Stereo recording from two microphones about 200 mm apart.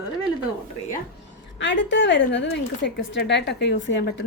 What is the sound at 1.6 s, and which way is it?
A woman's voice, 65° left (ahead or behind).